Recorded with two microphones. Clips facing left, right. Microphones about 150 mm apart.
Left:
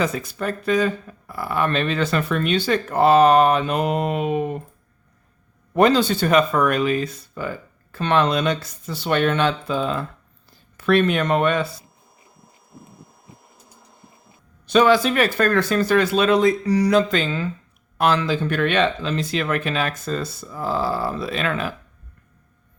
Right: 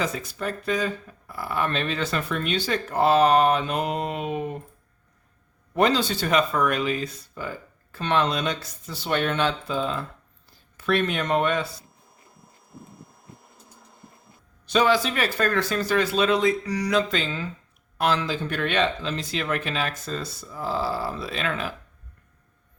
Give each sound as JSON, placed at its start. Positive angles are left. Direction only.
{"t": 0.0, "sound": "speech", "side_deg": 60}
{"t": 5.7, "sound": "speech", "side_deg": 55}
{"t": 14.7, "sound": "speech", "side_deg": 60}
{"t": 16.6, "sound": "a sound", "side_deg": 30}
{"t": 16.9, "sound": "speech", "side_deg": 55}